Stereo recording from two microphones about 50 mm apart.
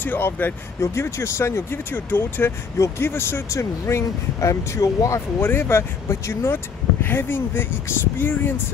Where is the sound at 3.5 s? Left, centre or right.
Left.